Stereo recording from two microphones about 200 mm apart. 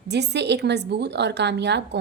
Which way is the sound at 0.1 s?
60° right (ahead or behind).